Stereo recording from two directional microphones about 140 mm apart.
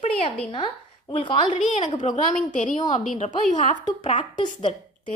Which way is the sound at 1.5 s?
60° left (ahead or behind).